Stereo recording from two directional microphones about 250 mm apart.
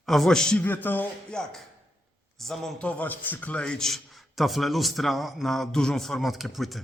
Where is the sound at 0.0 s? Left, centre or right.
Centre.